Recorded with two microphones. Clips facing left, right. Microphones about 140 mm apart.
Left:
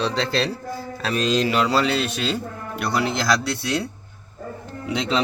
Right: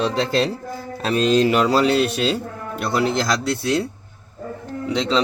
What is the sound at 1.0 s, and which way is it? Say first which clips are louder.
Speech: right 4 dB; 30° right (ahead or behind).